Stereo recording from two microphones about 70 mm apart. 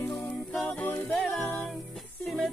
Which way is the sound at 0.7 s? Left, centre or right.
Left.